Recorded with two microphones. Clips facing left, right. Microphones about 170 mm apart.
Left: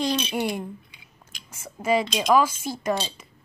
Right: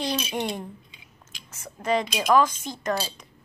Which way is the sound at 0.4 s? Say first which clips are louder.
Left 2 dB; 10° left (ahead or behind).